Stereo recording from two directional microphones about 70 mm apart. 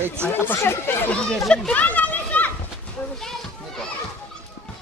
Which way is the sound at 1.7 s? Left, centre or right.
Left.